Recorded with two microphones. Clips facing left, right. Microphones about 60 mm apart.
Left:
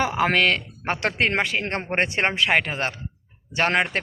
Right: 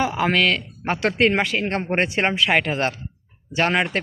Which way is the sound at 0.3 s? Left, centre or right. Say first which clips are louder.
Right 1 dB; left.